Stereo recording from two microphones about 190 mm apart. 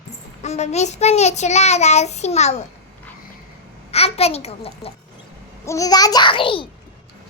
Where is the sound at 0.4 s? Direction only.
35° left (ahead or behind).